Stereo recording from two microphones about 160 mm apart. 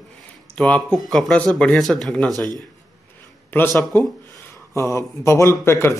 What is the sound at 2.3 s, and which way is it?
Speech, 25° right (ahead or behind).